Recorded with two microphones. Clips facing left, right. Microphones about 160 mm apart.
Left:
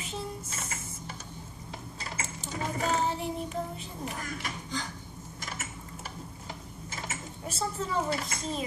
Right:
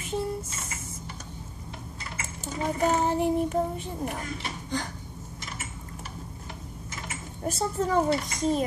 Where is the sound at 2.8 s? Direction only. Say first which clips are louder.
Right 6 dB; 50° right (ahead or behind).